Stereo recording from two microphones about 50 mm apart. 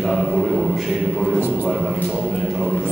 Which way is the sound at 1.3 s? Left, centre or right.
Right.